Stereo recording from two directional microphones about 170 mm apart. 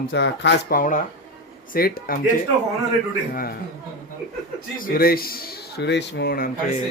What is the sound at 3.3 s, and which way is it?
Speech, 60° left (ahead or behind).